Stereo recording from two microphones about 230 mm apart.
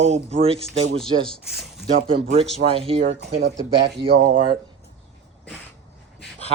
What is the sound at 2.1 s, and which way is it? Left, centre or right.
Speech, right.